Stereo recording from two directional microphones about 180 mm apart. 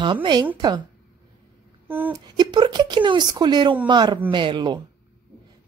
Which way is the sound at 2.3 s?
25° right (ahead or behind).